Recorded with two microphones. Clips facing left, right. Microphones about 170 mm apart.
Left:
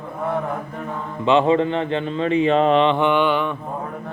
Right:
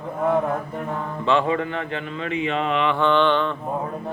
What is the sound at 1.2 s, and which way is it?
Speech, 20° left (ahead or behind).